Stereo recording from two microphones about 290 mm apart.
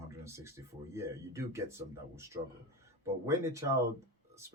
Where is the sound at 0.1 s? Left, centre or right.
Centre.